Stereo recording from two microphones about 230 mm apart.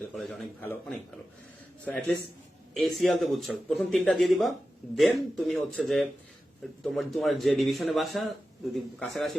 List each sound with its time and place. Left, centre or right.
0.0 s a man's voice: centre